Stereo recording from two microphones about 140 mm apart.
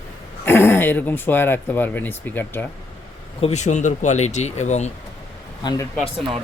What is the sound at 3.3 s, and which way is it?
Speech, 50° left (ahead or behind).